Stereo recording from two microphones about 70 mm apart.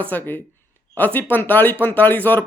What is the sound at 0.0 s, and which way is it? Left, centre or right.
Speech, left.